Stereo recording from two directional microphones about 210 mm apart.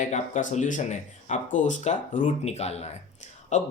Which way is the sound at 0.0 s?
35° left (ahead or behind).